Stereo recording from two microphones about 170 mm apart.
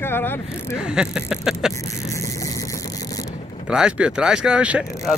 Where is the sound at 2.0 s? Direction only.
20° left (ahead or behind).